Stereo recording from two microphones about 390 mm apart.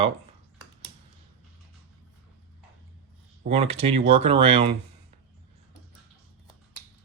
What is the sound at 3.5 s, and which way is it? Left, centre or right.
Speech, centre.